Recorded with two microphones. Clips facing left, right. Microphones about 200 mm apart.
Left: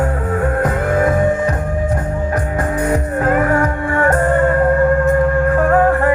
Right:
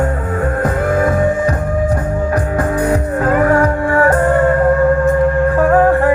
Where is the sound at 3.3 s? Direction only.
35° right (ahead or behind).